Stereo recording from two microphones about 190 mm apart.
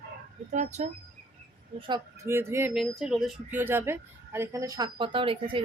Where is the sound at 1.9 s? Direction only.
15° right (ahead or behind).